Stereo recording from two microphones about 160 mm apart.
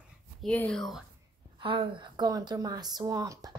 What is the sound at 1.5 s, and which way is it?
A woman's voice, 30° right (ahead or behind).